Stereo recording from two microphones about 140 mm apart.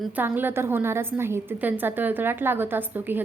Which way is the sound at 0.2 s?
15° right (ahead or behind).